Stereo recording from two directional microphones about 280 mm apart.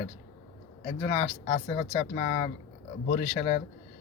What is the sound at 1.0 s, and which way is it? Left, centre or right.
Speech, left.